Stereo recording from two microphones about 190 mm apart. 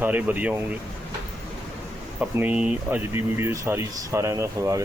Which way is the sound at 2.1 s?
10° right (ahead or behind).